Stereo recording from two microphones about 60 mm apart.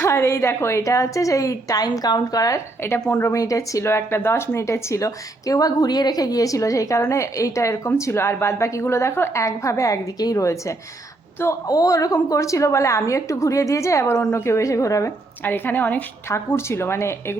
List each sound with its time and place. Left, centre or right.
0.0 s a woman's voice: left
2.8 s a woman's voice: left
3.2 s a woman's voice: left
9.4 s speech: left
11.7 s speech: left
15.4 s a woman's voice: left
16.3 s a woman's voice: left